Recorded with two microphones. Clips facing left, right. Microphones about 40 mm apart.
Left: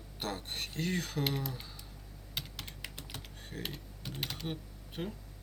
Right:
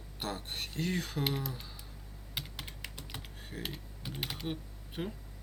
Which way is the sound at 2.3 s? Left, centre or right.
Centre.